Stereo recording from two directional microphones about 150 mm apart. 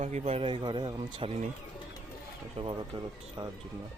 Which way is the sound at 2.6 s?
40° right (ahead or behind).